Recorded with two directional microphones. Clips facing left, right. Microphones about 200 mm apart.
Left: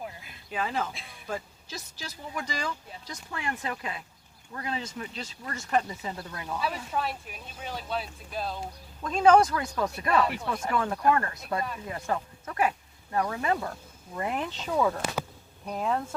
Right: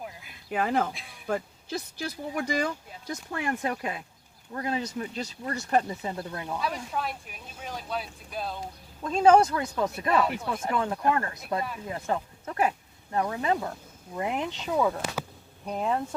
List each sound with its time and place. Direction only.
0.5 s speech: 55° right (ahead or behind)
0.9 s speech: centre (ahead or behind)
1.3 s speech: 60° right (ahead or behind); by 5.5 s 40° right (ahead or behind)
5.9 s speech: 25° right (ahead or behind)
6.6 s speech: 5° left (ahead or behind)
9.0 s speech: 30° right (ahead or behind)
10.1 s speech: centre (ahead or behind)
10.5 s speech: 25° right (ahead or behind)
14.8 s speech: 5° right (ahead or behind)